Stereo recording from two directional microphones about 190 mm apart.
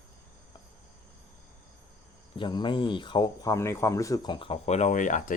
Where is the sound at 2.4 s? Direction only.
25° left (ahead or behind).